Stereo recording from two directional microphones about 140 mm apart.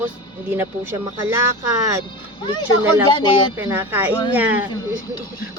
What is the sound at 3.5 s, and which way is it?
Speech, 15° right (ahead or behind).